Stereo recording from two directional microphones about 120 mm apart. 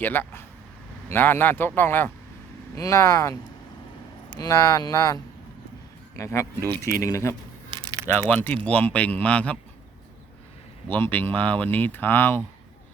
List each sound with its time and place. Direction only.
0.0 s speech: 15° left (ahead or behind)
4.4 s speech: 30° left (ahead or behind)
8.3 s speech: 15° left (ahead or behind)
10.8 s speech: 15° left (ahead or behind)